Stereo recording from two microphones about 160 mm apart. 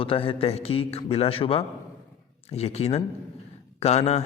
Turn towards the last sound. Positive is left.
turn(degrees=40)  # may be behind; listen again after turning